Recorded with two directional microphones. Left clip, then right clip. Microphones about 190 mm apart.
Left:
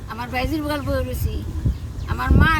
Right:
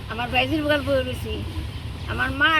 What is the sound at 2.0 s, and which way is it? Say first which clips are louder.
Speech: right 1 dB; 5° left (ahead or behind).